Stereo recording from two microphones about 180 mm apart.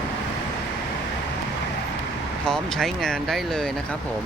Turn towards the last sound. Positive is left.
turn(degrees=0)  # may be behind; listen again after turning